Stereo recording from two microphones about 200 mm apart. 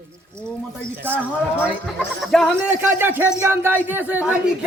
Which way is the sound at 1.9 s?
Centre (ahead or behind).